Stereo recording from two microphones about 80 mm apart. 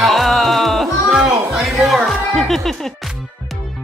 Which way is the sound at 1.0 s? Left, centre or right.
Centre.